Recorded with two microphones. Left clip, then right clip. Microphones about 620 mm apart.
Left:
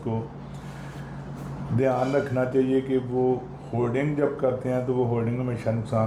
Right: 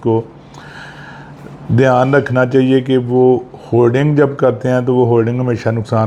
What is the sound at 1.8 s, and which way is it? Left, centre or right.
Speech, right.